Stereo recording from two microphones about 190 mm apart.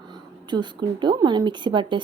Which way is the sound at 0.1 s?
25° right (ahead or behind).